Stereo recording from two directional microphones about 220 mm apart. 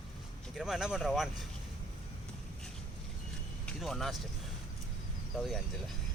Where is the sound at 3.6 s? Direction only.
Centre (ahead or behind).